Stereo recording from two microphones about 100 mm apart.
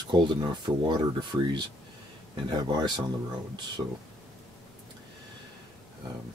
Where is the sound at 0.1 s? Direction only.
50° right (ahead or behind).